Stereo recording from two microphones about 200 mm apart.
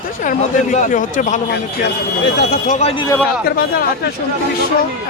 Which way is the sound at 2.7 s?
35° left (ahead or behind).